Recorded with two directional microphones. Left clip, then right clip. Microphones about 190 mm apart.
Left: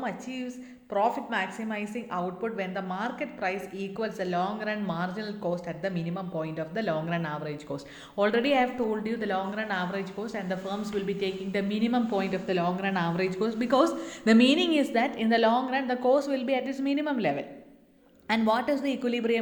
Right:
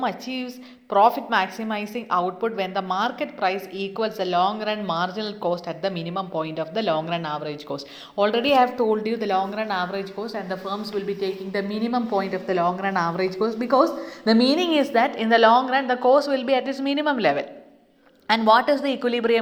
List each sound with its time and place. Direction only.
0.0 s a woman's voice: 25° right (ahead or behind)
8.5 s a woman's voice: 25° right (ahead or behind); by 19.4 s centre (ahead or behind)